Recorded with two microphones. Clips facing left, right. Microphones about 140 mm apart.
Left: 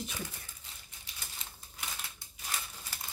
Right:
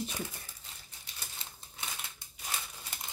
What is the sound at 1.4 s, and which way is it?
Typewriter, 30° right (ahead or behind).